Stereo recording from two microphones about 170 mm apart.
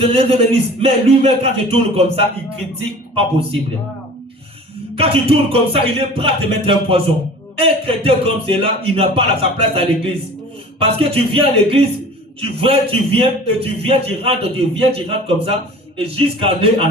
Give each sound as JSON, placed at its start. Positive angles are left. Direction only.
{"t": 0.0, "sound": "speech", "side_deg": -35}
{"t": 4.9, "sound": "speech", "side_deg": -35}